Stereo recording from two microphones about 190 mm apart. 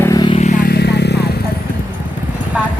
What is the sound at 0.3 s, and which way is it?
Vehicle, 40° left (ahead or behind).